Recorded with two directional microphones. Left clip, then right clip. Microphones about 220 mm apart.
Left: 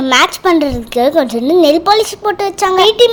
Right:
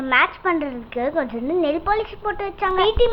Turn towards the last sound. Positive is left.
turn(degrees=45)  # may be behind; listen again after turning